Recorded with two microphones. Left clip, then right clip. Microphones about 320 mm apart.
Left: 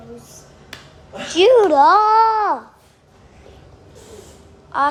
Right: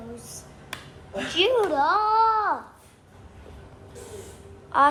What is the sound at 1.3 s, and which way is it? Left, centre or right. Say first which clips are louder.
A child's voice: left 10 dB; centre.